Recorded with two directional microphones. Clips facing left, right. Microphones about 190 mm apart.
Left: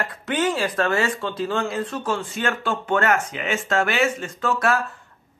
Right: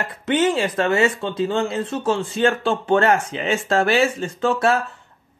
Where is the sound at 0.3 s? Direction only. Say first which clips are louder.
Right 4 dB; 25° right (ahead or behind).